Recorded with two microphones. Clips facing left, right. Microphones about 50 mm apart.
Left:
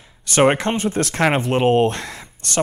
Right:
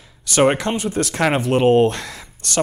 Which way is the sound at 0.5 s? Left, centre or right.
Left.